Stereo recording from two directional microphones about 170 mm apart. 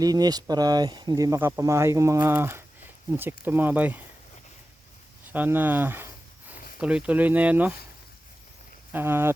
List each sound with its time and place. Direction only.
0.0 s speech: 20° right (ahead or behind)
5.3 s speech: 10° right (ahead or behind)
8.9 s speech: 10° right (ahead or behind)